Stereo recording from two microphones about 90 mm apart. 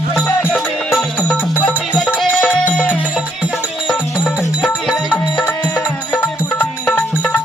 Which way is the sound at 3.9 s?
5° right (ahead or behind).